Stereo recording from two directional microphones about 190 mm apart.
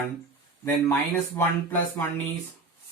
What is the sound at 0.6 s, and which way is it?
Speech, 10° left (ahead or behind).